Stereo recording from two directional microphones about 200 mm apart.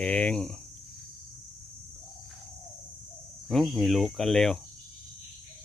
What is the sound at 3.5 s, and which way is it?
Speech, centre (ahead or behind).